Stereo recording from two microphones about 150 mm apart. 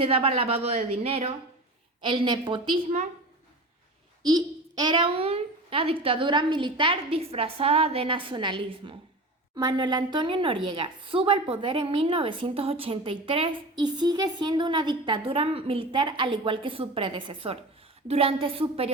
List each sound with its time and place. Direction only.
0.0 s a child's voice: 40° right (ahead or behind)
4.2 s a child's voice: 25° right (ahead or behind)